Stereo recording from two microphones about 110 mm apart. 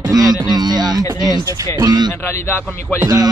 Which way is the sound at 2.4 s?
20° left (ahead or behind).